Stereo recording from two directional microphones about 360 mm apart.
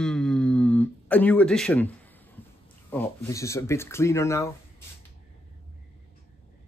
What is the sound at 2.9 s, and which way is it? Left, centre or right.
Speech, centre.